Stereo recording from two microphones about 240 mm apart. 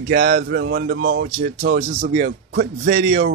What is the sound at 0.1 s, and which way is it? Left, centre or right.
Speech, right.